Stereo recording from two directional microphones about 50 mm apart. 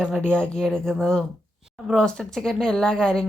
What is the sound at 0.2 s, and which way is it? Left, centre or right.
Speech, centre.